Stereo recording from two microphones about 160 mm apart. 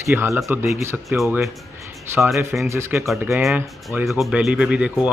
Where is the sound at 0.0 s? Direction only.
15° right (ahead or behind).